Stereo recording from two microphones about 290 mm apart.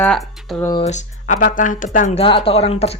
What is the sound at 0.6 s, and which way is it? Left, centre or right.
Speech, centre.